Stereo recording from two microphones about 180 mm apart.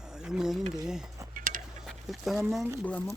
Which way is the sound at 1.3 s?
50° right (ahead or behind).